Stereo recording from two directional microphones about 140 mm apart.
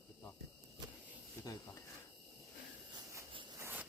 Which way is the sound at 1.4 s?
25° left (ahead or behind).